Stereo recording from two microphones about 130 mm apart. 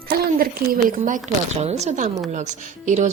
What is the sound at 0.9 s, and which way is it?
Speech, 80° right.